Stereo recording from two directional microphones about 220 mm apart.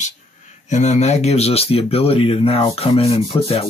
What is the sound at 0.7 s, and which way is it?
Speech, 30° left (ahead or behind).